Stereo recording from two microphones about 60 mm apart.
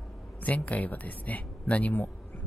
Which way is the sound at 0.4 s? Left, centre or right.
Left.